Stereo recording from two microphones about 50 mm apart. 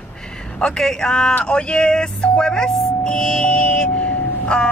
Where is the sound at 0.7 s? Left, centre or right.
Centre.